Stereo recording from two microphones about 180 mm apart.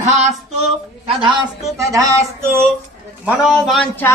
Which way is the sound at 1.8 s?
20° right (ahead or behind).